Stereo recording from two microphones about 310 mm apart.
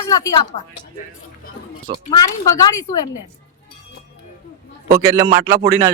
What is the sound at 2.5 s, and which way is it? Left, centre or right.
Speech, centre.